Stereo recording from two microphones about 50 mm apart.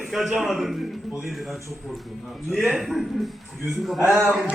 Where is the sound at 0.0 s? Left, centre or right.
Centre.